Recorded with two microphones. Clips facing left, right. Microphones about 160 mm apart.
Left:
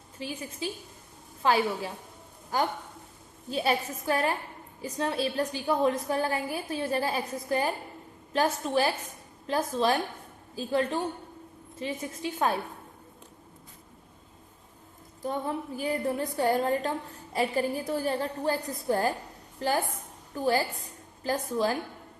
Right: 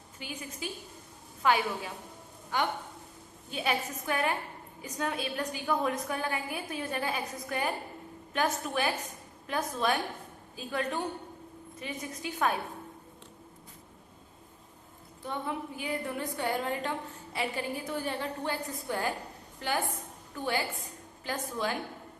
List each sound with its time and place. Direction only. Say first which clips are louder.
0.2 s a woman's voice: left 5 dB; 35° left (ahead or behind)
15.2 s a woman's voice: left 4 dB; 40° left (ahead or behind)